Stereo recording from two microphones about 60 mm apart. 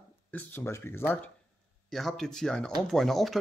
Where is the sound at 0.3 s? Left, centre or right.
Left.